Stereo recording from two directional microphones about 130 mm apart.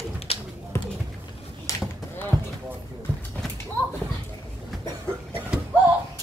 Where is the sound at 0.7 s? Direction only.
20° left (ahead or behind).